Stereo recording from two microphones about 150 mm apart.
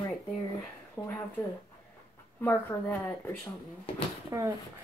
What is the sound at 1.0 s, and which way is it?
Speech, 15° left (ahead or behind).